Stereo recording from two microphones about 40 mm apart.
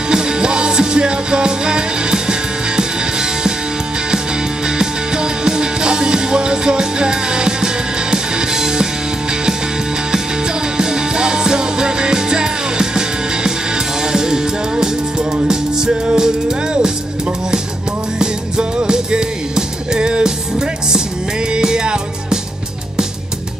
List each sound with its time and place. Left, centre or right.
0.1 s music: centre
4.6 s music: centre
10.8 s music: centre
18.2 s music: centre